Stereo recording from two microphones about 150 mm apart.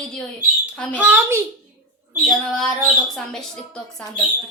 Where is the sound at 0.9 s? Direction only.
10° right (ahead or behind).